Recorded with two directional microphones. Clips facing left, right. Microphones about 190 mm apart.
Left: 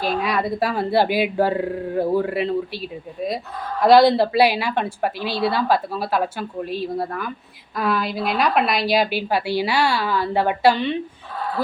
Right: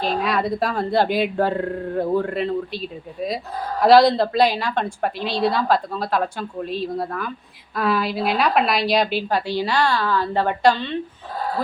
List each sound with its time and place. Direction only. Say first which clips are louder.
0.0 s a woman's voice: even; centre (ahead or behind)